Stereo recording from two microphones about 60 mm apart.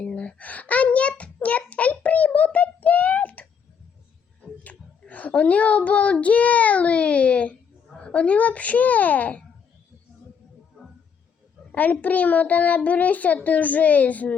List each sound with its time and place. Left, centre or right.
0.0 s a sound: left
4.6 s a child's voice: left
11.7 s a child's voice: left